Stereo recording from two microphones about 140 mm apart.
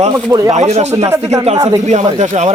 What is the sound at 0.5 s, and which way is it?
Speech, 55° right (ahead or behind).